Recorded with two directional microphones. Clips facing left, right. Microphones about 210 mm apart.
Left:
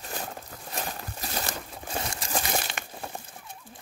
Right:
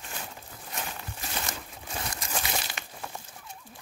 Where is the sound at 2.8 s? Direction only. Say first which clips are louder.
Left 4 dB; 50° left (ahead or behind).